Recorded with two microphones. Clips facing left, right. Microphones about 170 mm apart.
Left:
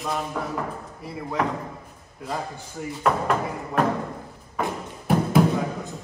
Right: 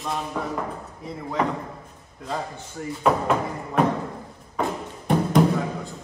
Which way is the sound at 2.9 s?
Centre (ahead or behind).